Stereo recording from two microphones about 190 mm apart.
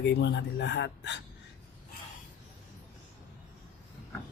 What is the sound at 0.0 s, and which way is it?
Speech, 65° left (ahead or behind).